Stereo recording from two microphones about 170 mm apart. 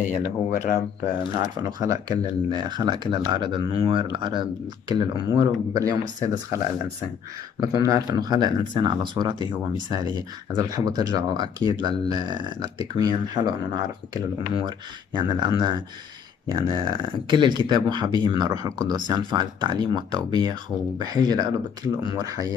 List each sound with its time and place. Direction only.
0.1 s speech: 55° left (ahead or behind)
1.6 s speech: 20° right (ahead or behind)
7.6 s speech: 20° right (ahead or behind)